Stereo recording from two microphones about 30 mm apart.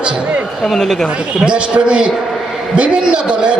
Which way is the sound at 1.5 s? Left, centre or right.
Right.